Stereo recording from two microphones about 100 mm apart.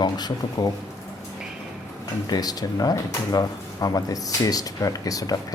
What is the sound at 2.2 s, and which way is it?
Speech, 40° left (ahead or behind).